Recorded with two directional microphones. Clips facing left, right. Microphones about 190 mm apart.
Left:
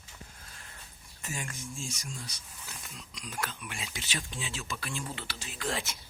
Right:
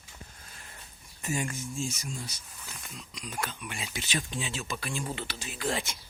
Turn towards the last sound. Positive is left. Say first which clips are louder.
# right 3 dB
turn(degrees=0)  # may be behind; listen again after turning